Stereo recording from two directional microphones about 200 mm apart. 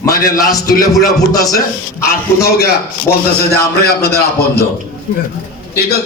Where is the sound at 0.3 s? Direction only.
15° left (ahead or behind).